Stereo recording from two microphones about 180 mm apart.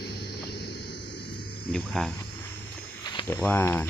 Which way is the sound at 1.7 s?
5° left (ahead or behind).